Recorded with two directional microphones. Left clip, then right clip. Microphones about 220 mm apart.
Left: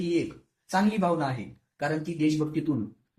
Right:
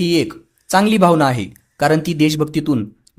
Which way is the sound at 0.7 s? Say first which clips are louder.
Right 13 dB; 45° right (ahead or behind).